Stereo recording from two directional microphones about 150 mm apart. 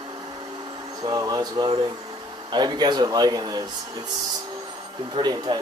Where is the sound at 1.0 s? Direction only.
25° right (ahead or behind).